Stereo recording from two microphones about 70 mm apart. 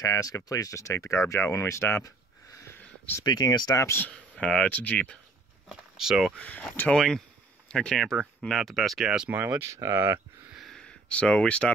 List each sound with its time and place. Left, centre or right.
0.0 s speech: left
3.3 s speech: left
3.7 s speech: left
4.1 s speech: centre
5.7 s speech: centre
6.3 s speech: centre
6.9 s a sound: centre
8.0 s speech: centre
9.0 s speech: centre
9.9 s speech: right
10.7 s a sound: centre